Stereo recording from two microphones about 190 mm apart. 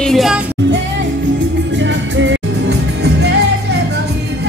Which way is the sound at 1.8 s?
75° right (ahead or behind).